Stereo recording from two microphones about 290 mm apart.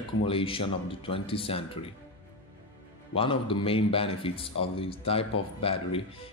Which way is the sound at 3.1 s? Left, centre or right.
Centre.